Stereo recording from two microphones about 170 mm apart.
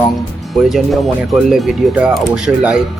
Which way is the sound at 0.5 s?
Centre (ahead or behind).